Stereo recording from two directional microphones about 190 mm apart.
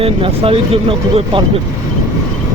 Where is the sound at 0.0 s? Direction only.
30° right (ahead or behind).